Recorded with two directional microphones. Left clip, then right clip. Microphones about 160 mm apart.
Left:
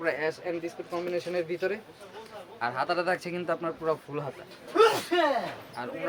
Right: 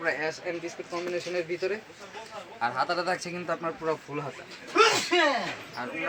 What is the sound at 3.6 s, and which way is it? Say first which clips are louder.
Speech: even; 35° left (ahead or behind).